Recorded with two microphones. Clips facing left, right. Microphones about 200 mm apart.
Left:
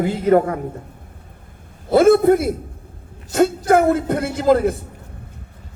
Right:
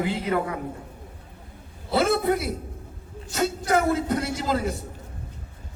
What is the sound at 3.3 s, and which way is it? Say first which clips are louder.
A man's voice: left 8 dB; 50° left (ahead or behind).